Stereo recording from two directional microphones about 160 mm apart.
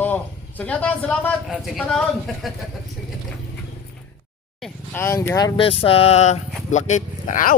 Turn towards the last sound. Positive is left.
turn(degrees=60)  # may be behind; listen again after turning